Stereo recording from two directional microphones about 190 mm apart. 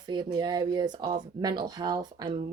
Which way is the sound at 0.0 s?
25° right (ahead or behind).